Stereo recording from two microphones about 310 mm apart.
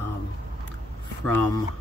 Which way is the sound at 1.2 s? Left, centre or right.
Centre.